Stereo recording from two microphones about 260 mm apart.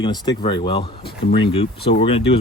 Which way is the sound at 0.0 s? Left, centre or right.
Centre.